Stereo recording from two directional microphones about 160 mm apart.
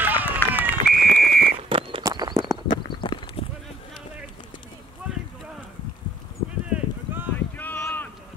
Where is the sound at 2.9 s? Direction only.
30° left (ahead or behind).